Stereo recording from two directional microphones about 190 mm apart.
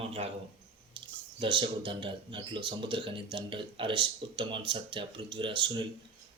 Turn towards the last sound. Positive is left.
turn(degrees=-25)  # may be behind; listen again after turning